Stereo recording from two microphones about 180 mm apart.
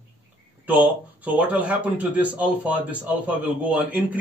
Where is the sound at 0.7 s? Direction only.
10° right (ahead or behind).